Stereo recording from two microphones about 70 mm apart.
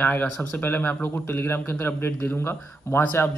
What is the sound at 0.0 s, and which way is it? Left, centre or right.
A man's voice, left.